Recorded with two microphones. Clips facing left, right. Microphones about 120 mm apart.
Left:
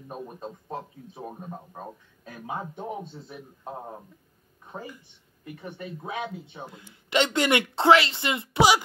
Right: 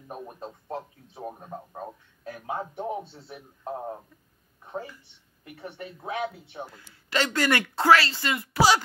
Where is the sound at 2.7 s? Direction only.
20° right (ahead or behind).